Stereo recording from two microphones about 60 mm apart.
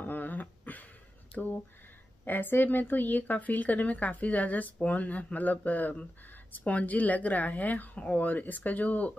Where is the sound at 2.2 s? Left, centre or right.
Left.